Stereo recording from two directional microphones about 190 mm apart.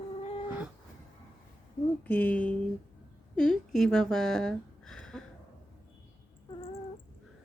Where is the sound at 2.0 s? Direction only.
10° left (ahead or behind).